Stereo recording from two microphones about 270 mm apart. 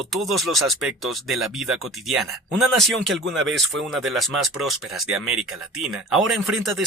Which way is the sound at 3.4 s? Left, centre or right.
Right.